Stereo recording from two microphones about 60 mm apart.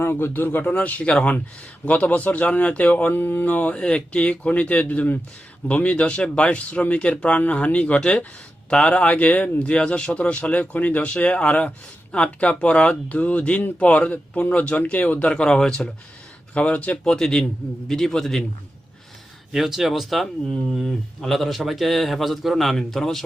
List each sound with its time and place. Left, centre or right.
0.0 s a man's voice: left; by 15.9 s centre
16.6 s speech: left
17.0 s a man's voice: centre
19.5 s a man's voice: centre